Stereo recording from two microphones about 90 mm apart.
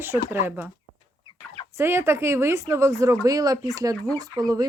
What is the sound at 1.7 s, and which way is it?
Speech, 30° right (ahead or behind).